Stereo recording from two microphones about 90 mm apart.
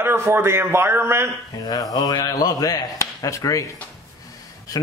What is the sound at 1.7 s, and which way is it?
Speech, 45° left (ahead or behind).